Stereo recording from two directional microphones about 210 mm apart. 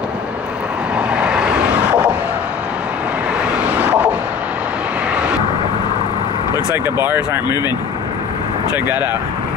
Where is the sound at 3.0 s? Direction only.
5° right (ahead or behind).